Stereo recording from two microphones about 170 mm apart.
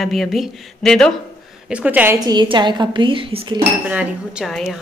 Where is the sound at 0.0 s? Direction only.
Centre (ahead or behind).